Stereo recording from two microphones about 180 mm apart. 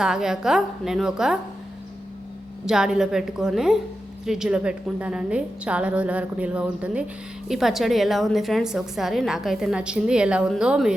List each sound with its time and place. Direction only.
0.0 s a woman's voice: 5° right (ahead or behind)
2.6 s a woman's voice: 5° right (ahead or behind)